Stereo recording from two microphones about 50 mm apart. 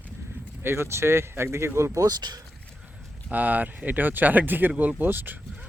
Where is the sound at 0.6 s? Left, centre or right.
Right.